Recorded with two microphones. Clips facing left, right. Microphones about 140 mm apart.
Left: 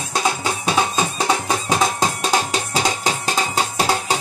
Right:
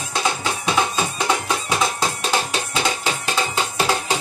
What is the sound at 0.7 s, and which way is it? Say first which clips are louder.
Music: left 1 dB; 35° left (ahead or behind).